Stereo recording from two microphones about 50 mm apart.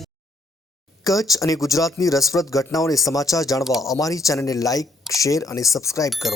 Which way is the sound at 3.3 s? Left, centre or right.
Left.